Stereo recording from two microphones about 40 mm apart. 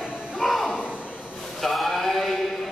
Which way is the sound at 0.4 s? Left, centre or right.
Centre.